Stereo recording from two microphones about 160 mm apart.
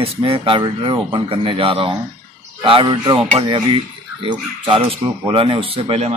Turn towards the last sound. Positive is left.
turn(degrees=-40)  # may be behind; listen again after turning